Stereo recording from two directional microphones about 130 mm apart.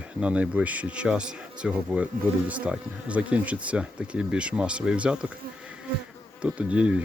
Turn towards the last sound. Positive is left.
turn(degrees=-10)  # may be behind; listen again after turning